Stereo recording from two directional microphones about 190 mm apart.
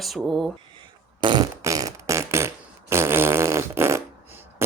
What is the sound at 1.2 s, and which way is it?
Fart, 20° right (ahead or behind).